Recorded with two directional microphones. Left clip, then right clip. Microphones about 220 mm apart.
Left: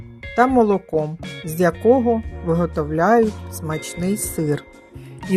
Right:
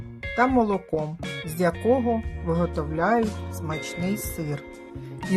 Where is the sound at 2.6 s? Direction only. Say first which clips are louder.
Left 6 dB; 15° left (ahead or behind).